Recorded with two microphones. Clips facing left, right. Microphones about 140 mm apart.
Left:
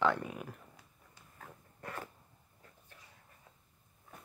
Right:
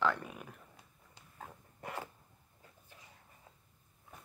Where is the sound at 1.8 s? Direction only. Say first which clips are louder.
Right 1 dB; 15° right (ahead or behind).